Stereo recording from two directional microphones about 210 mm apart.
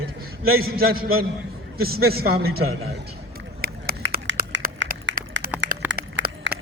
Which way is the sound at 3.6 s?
45° right (ahead or behind).